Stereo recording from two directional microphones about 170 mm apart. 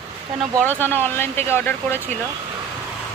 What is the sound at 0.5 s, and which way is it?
Speech, 10° left (ahead or behind).